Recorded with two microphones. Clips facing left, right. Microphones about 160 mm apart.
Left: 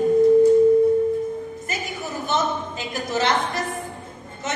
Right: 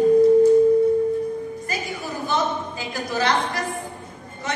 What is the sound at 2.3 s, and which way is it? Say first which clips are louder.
A woman's voice: even; 20° left (ahead or behind).